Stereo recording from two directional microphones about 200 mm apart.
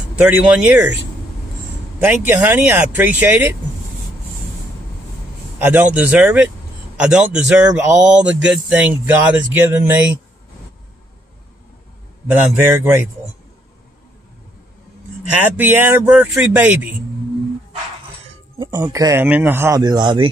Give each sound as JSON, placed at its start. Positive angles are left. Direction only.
{"t": 0.1, "sound": "speech", "side_deg": -5}
{"t": 2.0, "sound": "speech", "side_deg": -10}
{"t": 5.6, "sound": "speech", "side_deg": -10}
{"t": 12.3, "sound": "speech", "side_deg": -10}
{"t": 15.4, "sound": "speech", "side_deg": -10}
{"t": 18.6, "sound": "speech", "side_deg": -15}